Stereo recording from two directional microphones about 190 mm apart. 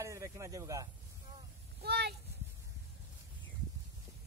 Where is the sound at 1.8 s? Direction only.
60° right (ahead or behind).